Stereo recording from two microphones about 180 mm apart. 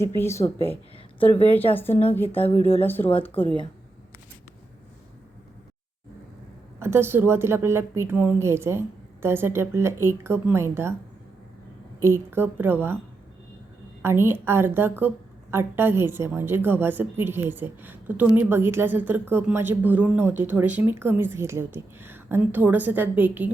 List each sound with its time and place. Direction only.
0.2 s speech: 15° left (ahead or behind)
0.4 s a woman's voice: 30° left (ahead or behind)
2.8 s speech: 10° left (ahead or behind)
6.7 s a woman's voice: 15° right (ahead or behind)
11.9 s a woman's voice: 15° right (ahead or behind)
14.0 s a woman's voice: 15° right (ahead or behind)